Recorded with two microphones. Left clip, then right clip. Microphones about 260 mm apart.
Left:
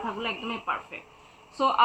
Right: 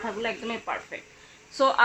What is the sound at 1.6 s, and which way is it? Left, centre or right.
Speech, right.